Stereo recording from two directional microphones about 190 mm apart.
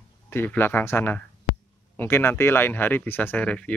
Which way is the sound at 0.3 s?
10° left (ahead or behind).